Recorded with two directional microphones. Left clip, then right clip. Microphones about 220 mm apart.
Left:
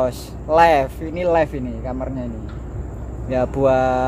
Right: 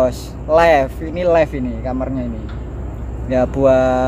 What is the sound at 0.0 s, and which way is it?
Speech, 10° left (ahead or behind).